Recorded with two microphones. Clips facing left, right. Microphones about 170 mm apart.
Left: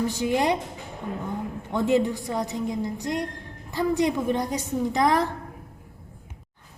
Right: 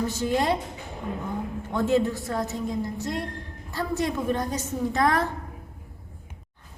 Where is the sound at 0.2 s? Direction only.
15° left (ahead or behind).